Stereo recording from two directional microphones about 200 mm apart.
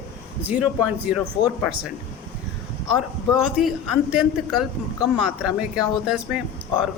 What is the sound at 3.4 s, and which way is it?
Speech, 5° right (ahead or behind).